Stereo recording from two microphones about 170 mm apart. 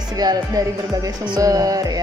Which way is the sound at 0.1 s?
20° right (ahead or behind).